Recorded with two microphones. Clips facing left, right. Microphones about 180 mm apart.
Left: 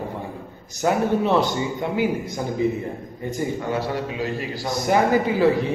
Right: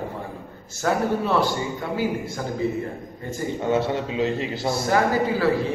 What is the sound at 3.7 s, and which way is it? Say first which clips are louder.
Speech: right 3 dB; 25° right (ahead or behind).